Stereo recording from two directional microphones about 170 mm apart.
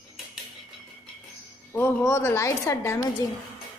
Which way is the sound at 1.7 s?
15° left (ahead or behind).